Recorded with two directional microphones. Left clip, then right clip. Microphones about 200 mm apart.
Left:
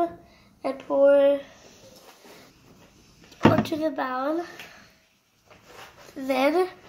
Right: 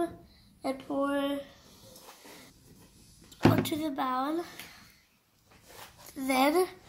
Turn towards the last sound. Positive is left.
turn(degrees=-60)  # may be behind; listen again after turning